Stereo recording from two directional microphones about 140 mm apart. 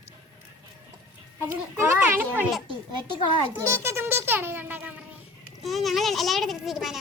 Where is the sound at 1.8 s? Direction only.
20° right (ahead or behind).